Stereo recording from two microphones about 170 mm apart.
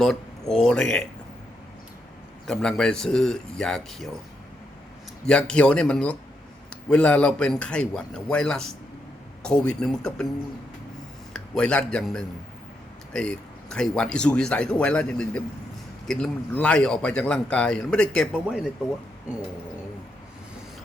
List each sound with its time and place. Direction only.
0.0 s speech: 5° left (ahead or behind)
2.5 s speech: 5° left (ahead or behind)
5.2 s speech: 5° left (ahead or behind)
11.3 s speech: 5° left (ahead or behind)